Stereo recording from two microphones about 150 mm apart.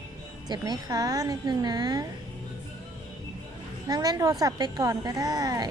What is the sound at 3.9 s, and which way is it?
A woman's voice, 25° right (ahead or behind).